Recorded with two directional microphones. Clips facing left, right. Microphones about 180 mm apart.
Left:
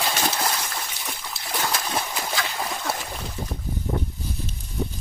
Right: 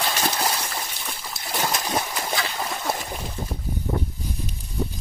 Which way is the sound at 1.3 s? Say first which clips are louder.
Right 1 dB; 20° right (ahead or behind).